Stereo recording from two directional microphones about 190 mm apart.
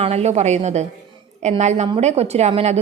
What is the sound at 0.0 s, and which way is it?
A woman's voice, 35° right (ahead or behind).